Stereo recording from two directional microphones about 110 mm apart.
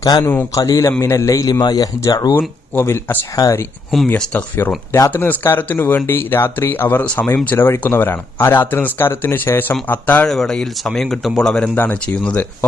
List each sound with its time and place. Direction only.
0.0 s a man's voice: 40° left (ahead or behind)
0.5 s a man's voice: 30° left (ahead or behind)
2.7 s speech: 20° left (ahead or behind)
3.3 s a man's voice: 35° left (ahead or behind)
4.1 s speech: 15° left (ahead or behind)
10.2 s speech: 5° left (ahead or behind)